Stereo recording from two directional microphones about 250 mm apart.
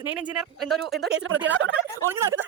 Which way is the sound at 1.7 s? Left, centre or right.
Centre.